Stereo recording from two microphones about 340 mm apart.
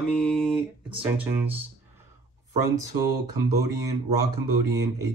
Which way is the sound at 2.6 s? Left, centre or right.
Right.